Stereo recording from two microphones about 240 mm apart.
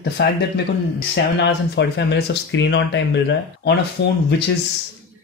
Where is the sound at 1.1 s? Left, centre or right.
Left.